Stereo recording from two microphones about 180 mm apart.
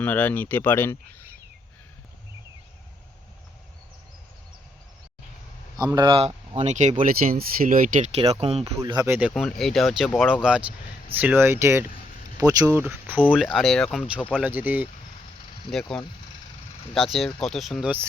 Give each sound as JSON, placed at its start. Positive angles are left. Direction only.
{"t": 0.0, "sound": "speech", "side_deg": 10}
{"t": 5.7, "sound": "speech", "side_deg": -20}
{"t": 7.0, "sound": "speech", "side_deg": -50}
{"t": 8.1, "sound": "speech", "side_deg": -35}
{"t": 8.6, "sound": "speech", "side_deg": -20}
{"t": 9.3, "sound": "speech", "side_deg": 0}
{"t": 15.7, "sound": "speech", "side_deg": 5}